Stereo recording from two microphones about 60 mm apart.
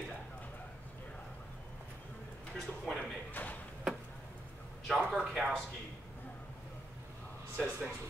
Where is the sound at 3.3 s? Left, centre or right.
Left.